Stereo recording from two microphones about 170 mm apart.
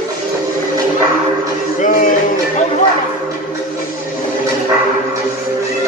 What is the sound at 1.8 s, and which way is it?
Music, 50° left (ahead or behind).